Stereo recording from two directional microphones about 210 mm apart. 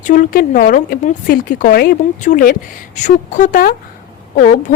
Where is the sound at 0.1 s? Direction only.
40° left (ahead or behind).